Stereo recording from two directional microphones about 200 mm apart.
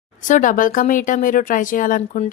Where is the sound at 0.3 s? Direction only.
40° left (ahead or behind).